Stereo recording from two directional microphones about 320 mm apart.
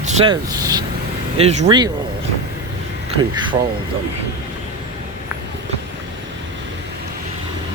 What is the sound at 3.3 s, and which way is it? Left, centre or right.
Speech, centre.